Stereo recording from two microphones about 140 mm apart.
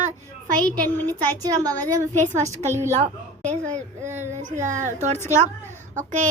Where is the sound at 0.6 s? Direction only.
10° left (ahead or behind).